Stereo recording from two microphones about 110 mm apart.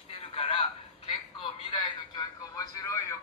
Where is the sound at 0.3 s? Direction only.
60° left (ahead or behind).